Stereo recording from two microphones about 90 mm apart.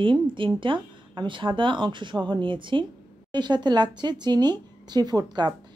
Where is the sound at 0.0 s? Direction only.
65° right (ahead or behind).